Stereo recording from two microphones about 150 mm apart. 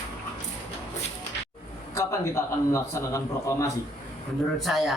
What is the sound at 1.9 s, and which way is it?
A man's voice, 20° left (ahead or behind).